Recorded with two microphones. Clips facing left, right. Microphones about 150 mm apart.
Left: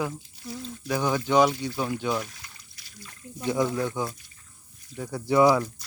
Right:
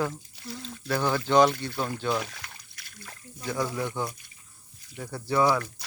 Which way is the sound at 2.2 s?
75° right (ahead or behind).